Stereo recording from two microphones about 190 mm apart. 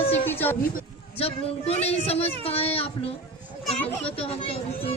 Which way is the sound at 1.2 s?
30° left (ahead or behind).